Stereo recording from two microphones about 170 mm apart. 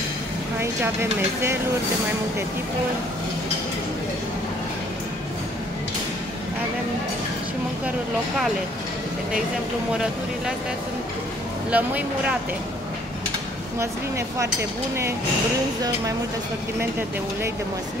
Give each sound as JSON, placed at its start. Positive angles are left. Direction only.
{"t": 11.7, "sound": "speech", "side_deg": -10}
{"t": 13.7, "sound": "speech", "side_deg": -15}